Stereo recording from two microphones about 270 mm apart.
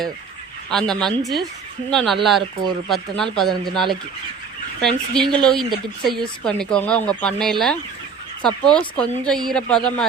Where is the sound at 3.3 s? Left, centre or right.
Centre.